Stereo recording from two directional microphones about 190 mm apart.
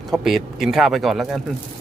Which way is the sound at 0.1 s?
Centre (ahead or behind).